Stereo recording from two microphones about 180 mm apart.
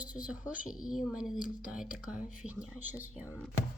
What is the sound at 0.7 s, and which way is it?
A woman's voice, 5° right (ahead or behind).